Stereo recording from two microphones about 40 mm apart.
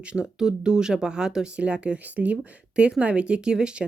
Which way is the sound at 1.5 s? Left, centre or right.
Right.